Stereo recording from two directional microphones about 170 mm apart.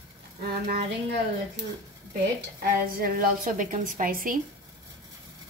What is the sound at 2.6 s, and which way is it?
A woman's voice, 55° right (ahead or behind).